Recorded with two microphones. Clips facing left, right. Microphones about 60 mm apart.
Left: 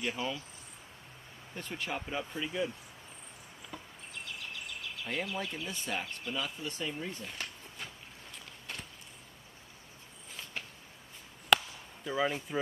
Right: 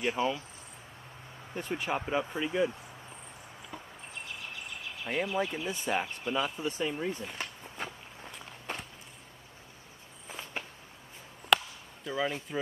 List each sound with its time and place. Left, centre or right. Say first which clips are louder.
0.0 s speech: right 6 dB; centre
1.5 s speech: right 5 dB; centre
5.0 s speech: right 6 dB; right
8.7 s walk: right 5 dB; right
10.2 s walk: right 4 dB; right
11.5 s chop: right 1 dB; centre